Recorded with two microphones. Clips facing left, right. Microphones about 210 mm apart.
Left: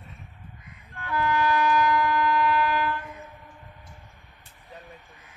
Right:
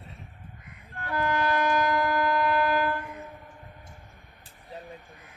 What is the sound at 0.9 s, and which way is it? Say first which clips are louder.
Music: left 2 dB; 45° right (ahead or behind).